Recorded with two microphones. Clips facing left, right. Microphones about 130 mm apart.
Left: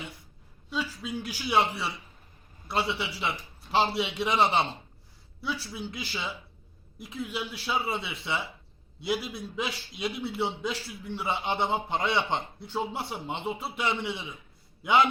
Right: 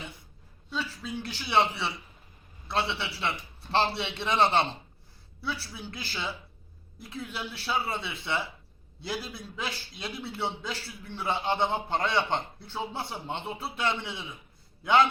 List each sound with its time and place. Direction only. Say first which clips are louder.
0.7 s a man's voice: left 2 dB; 15° left (ahead or behind)
5.4 s a man's voice: left 2 dB; 15° left (ahead or behind)